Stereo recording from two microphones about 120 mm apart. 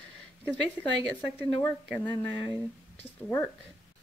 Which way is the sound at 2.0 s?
40° left (ahead or behind).